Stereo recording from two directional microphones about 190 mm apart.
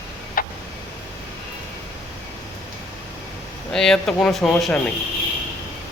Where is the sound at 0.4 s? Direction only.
50° left (ahead or behind).